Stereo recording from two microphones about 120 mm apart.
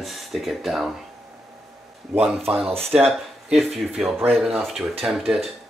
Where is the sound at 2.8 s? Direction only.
15° right (ahead or behind).